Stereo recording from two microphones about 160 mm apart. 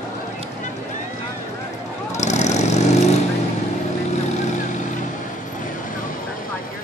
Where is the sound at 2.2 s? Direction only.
45° left (ahead or behind).